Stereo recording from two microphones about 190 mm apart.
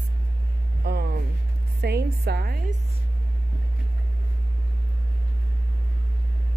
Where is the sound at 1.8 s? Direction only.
55° right (ahead or behind).